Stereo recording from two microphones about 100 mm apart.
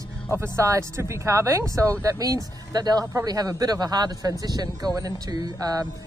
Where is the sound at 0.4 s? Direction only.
30° right (ahead or behind).